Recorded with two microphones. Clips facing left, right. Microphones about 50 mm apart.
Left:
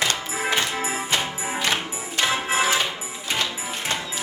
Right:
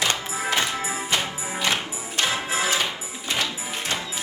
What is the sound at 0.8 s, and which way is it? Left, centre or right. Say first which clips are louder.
Music: left 1 dB; left.